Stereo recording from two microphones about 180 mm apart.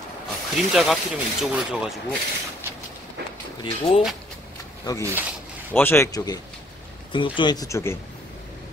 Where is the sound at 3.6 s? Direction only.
30° left (ahead or behind).